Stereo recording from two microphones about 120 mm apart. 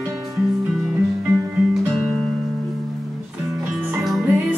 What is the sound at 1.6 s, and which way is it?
Music, 5° right (ahead or behind).